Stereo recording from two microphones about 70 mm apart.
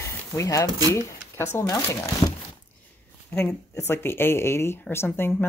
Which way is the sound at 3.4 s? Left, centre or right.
Left.